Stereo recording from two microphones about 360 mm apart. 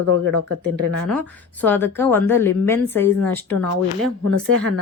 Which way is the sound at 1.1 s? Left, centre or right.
Centre.